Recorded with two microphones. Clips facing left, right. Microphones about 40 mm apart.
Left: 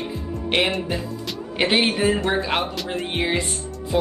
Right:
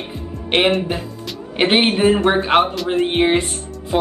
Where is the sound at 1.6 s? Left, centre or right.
Right.